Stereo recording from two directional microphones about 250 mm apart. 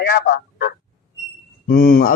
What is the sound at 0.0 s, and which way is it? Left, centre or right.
Speech, left.